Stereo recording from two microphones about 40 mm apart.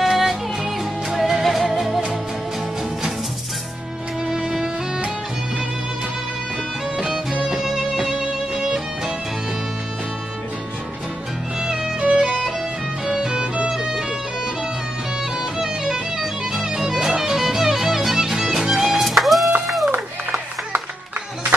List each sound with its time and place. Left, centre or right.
0.0 s music: centre
4.3 s music: centre
7.6 s music: centre
11.6 s music: centre
13.0 s music: centre
15.6 s music: centre
19.0 s music: centre
19.9 s a sound: right